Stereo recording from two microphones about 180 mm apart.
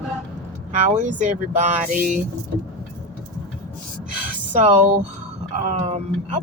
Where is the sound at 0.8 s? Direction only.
45° right (ahead or behind).